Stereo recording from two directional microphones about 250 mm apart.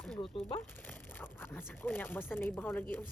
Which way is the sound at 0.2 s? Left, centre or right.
Left.